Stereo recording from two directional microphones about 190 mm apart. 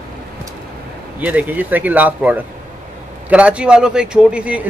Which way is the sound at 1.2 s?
10° right (ahead or behind).